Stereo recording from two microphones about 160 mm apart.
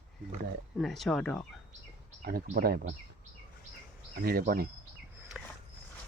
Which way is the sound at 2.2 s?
65° right (ahead or behind).